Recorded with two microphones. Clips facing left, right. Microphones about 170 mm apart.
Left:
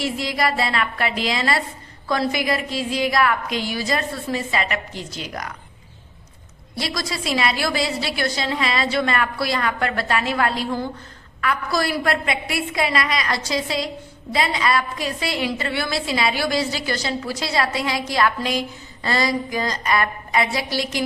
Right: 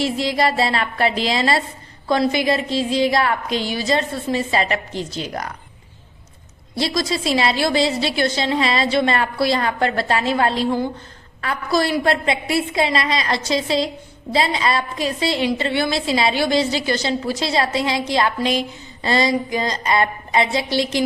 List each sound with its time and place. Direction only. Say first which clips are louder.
0.0 s a woman's voice: right 4 dB; 30° right (ahead or behind)
6.7 s a woman's voice: right 6 dB; 25° right (ahead or behind)